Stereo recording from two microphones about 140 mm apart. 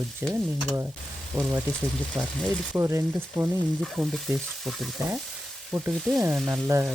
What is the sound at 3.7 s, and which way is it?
Stir, centre (ahead or behind).